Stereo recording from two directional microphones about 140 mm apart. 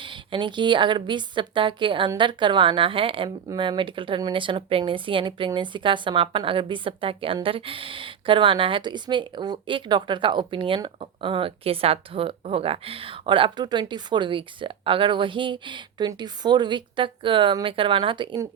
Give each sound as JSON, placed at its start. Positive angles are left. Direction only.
{"t": 0.0, "sound": "speech", "side_deg": -35}